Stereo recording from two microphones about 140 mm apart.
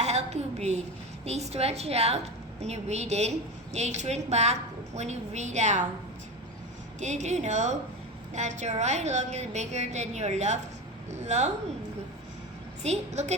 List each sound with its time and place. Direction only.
0.0 s a sound: 50° right (ahead or behind)
1.2 s a woman's voice: 50° right (ahead or behind)
7.0 s a woman's voice: 55° right (ahead or behind)
12.8 s a woman's voice: 50° right (ahead or behind)